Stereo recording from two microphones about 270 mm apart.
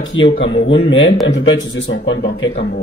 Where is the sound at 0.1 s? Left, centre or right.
Left.